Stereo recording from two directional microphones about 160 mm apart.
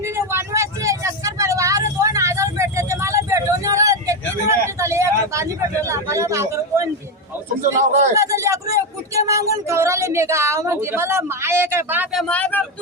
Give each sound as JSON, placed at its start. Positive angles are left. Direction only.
{"t": 0.0, "sound": "vehicle", "side_deg": -15}
{"t": 7.6, "sound": "a man's voice", "side_deg": -55}
{"t": 8.1, "sound": "speech", "side_deg": -20}
{"t": 12.1, "sound": "speech", "side_deg": 10}